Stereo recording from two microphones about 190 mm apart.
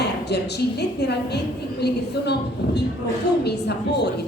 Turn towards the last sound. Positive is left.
turn(degrees=60)  # may be behind; listen again after turning